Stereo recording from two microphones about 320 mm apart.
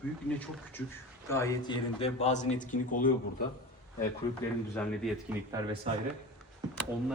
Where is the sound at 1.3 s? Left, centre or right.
Centre; by 3.4 s left.